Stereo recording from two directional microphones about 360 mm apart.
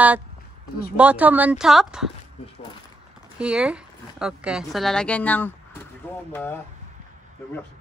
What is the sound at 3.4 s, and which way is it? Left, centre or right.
Speech, centre.